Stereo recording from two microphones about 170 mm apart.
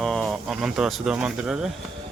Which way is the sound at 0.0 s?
Centre (ahead or behind).